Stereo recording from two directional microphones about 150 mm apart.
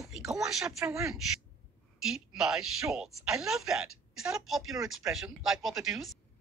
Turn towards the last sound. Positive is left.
turn(degrees=-5)  # may be behind; listen again after turning